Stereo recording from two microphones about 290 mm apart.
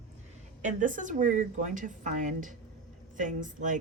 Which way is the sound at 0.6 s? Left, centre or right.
Right.